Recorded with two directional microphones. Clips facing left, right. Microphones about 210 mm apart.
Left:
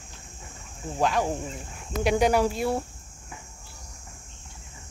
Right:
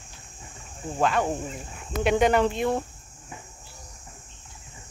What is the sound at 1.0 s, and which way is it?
Speech, centre (ahead or behind).